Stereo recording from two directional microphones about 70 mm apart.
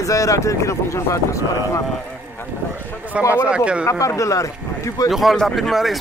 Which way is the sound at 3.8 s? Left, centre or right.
Left.